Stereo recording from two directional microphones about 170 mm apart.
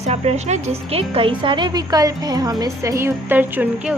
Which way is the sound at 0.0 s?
40° right (ahead or behind).